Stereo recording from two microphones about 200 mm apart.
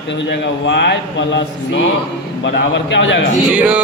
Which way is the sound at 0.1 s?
60° left (ahead or behind).